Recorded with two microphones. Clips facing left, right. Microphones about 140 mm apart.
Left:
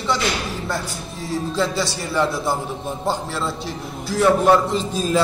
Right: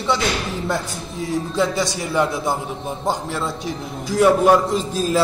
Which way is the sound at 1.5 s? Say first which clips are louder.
Right 2 dB; 20° right (ahead or behind).